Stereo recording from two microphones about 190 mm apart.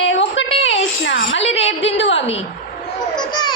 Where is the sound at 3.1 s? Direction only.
25° left (ahead or behind).